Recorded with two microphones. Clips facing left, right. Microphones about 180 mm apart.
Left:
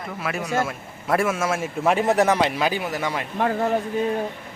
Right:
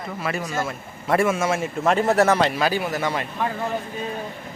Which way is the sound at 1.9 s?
15° left (ahead or behind).